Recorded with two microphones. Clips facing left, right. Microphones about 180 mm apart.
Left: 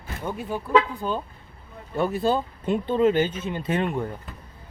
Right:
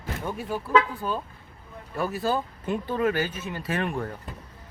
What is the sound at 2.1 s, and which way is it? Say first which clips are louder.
Speech: left 3 dB; 25° left (ahead or behind).